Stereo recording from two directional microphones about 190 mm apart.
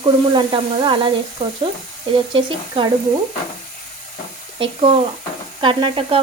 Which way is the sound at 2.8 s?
30° right (ahead or behind).